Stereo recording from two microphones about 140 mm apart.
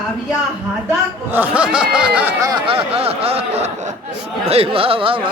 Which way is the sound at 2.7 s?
45° right (ahead or behind).